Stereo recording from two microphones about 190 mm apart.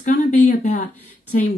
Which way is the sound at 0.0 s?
40° left (ahead or behind).